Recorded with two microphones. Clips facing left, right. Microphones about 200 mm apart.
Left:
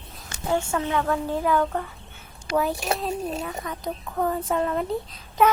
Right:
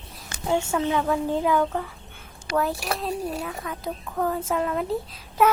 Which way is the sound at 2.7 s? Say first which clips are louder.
Left 2 dB; 25° left (ahead or behind).